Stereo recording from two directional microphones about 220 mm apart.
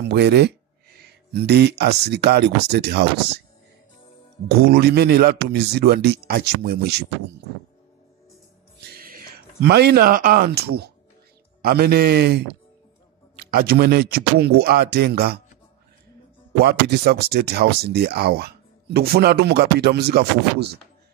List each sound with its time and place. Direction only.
0.0 s speech: 50° right (ahead or behind)
4.5 s speech: 45° right (ahead or behind)
8.7 s a sound: 40° right (ahead or behind)
11.6 s speech: 45° right (ahead or behind)
16.5 s speech: 45° right (ahead or behind)